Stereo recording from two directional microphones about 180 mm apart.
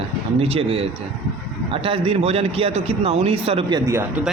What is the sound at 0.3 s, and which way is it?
Speech, 35° right (ahead or behind).